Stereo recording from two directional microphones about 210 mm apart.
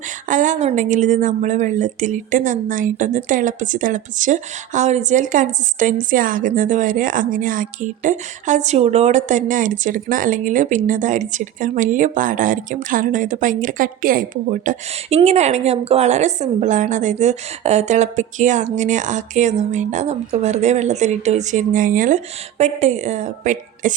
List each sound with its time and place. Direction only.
0.3 s speech: 40° right (ahead or behind)